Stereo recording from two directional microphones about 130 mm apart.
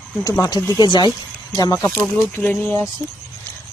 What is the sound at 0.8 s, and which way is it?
Speech, 35° left (ahead or behind).